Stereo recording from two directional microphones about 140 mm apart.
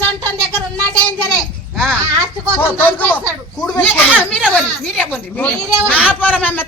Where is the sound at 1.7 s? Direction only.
5° left (ahead or behind).